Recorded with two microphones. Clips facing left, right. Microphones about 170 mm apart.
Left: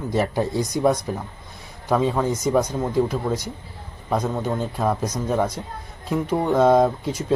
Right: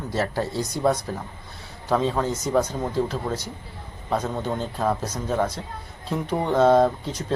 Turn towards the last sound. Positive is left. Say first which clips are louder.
# left 2 dB
turn(degrees=10)  # may be behind; listen again after turning